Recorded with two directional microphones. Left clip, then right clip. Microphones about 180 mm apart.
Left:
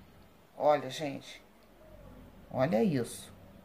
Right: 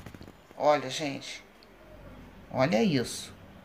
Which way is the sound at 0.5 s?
20° left (ahead or behind).